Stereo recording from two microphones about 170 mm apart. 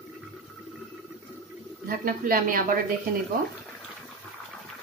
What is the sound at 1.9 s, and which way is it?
Speech, 55° right (ahead or behind).